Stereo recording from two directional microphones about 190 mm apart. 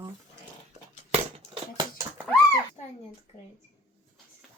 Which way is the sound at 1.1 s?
30° right (ahead or behind).